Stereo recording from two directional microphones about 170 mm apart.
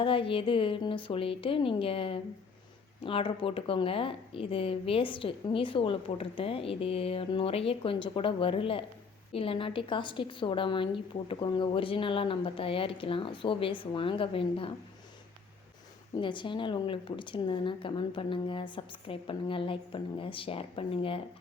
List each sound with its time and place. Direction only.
0.0 s a woman's voice: 30° left (ahead or behind)
16.2 s a woman's voice: 30° left (ahead or behind)